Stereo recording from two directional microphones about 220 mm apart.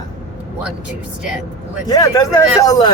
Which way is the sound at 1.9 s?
15° left (ahead or behind).